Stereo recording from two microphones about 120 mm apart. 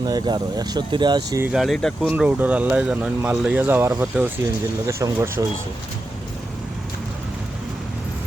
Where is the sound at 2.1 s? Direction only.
15° right (ahead or behind).